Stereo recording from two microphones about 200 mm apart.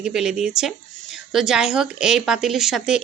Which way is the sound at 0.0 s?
Centre (ahead or behind).